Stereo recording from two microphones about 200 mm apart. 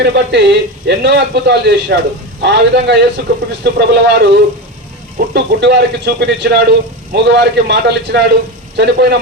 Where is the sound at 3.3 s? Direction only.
45° right (ahead or behind).